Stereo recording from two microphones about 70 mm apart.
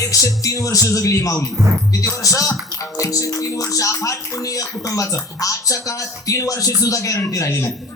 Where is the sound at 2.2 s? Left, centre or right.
Left.